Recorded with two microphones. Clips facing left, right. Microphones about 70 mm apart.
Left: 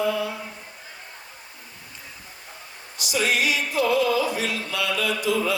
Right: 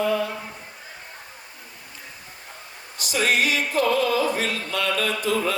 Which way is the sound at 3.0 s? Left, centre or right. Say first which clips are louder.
Right 1 dB; right.